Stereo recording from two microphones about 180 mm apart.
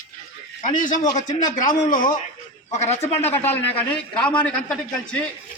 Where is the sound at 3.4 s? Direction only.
10° left (ahead or behind).